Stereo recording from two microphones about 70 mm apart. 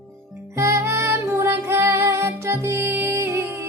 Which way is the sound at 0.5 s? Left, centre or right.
Right.